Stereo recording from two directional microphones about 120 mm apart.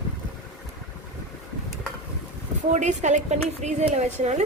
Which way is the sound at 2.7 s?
90° right.